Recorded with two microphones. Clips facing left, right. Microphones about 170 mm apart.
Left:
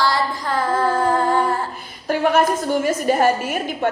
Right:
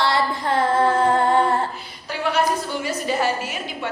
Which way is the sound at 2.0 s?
50° left (ahead or behind).